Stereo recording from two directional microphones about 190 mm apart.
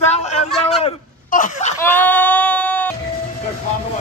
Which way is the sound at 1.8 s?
10° left (ahead or behind).